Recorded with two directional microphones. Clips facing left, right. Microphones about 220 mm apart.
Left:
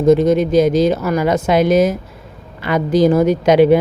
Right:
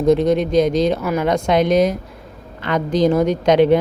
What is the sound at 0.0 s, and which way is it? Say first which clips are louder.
A man's voice: left 3 dB; centre (ahead or behind).